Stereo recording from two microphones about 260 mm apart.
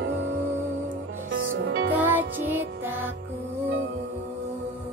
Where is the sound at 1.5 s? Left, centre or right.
Right.